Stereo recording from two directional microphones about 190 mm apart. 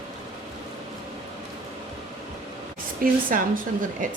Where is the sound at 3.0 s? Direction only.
45° right (ahead or behind).